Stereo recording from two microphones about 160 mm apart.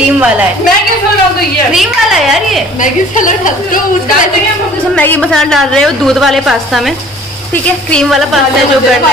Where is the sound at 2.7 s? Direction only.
55° left (ahead or behind).